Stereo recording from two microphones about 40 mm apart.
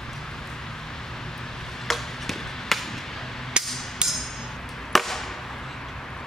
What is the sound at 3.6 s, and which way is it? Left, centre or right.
Hammer, right.